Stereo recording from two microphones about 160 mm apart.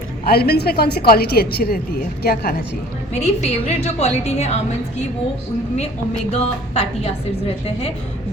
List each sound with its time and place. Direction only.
0.3 s a woman's voice: 80° left
3.1 s a woman's voice: 45° left (ahead or behind)
6.3 s a woman's voice: 40° left (ahead or behind)